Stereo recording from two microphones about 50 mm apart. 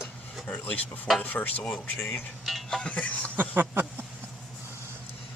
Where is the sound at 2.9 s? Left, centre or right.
Left.